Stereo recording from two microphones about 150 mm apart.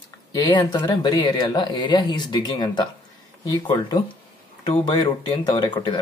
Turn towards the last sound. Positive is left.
turn(degrees=30)  # may be behind; listen again after turning